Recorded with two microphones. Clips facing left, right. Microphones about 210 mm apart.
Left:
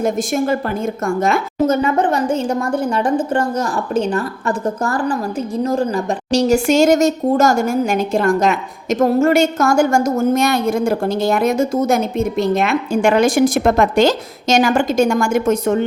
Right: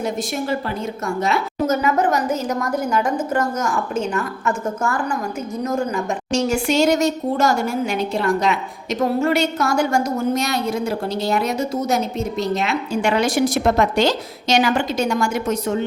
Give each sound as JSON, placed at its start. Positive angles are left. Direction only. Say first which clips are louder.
{"t": 1.0, "sound": "a woman's voice", "louder": "left 4 dB", "side_deg": 50}
{"t": 1.6, "sound": "a woman's voice", "louder": "left 3 dB", "side_deg": 30}